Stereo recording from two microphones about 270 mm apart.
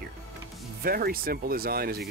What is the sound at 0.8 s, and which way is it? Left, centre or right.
Speech, right.